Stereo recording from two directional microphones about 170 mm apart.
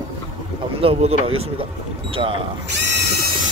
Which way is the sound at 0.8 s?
35° right (ahead or behind).